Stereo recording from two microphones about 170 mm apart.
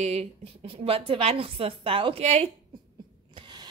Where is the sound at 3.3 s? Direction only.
25° right (ahead or behind).